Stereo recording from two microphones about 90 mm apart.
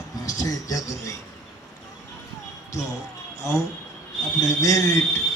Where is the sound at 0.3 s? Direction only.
40° left (ahead or behind).